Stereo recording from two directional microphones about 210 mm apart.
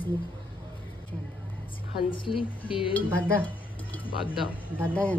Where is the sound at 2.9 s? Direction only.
10° left (ahead or behind).